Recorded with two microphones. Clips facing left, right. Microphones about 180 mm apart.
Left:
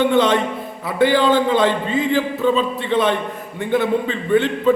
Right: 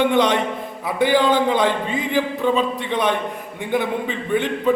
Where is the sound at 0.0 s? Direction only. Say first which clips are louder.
Left 2 dB; 15° right (ahead or behind).